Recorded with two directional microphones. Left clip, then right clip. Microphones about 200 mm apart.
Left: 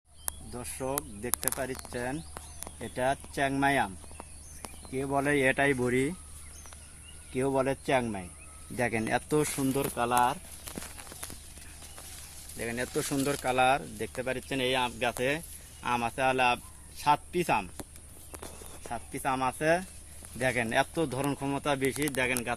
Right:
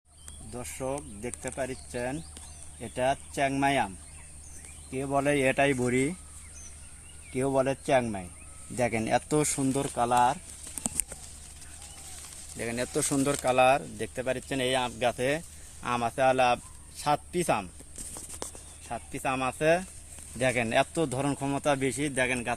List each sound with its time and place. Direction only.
0.5 s speech: 25° right (ahead or behind); by 6.1 s 40° right (ahead or behind)
7.3 s speech: 35° right (ahead or behind)
9.9 s speech: 50° right (ahead or behind)
12.5 s speech: 50° right (ahead or behind)
18.9 s speech: 40° right (ahead or behind)